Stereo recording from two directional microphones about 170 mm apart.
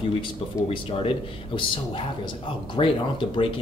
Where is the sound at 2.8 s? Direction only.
30° left (ahead or behind).